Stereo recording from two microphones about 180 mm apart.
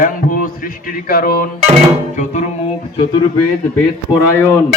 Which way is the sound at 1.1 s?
55° left (ahead or behind).